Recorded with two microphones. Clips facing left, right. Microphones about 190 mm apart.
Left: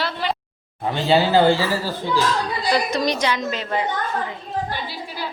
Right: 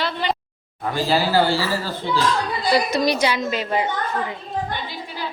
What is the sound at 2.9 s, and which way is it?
Speech, 10° right (ahead or behind).